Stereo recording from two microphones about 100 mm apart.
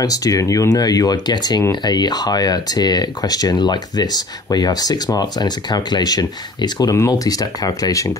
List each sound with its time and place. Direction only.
0.0 s speech: 35° left (ahead or behind)